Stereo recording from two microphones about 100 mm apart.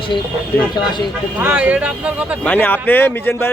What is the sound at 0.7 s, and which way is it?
Speech, 50° left (ahead or behind).